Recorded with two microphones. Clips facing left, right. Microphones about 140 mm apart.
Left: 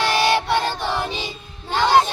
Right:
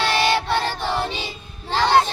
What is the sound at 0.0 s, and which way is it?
Child singing, 15° left (ahead or behind).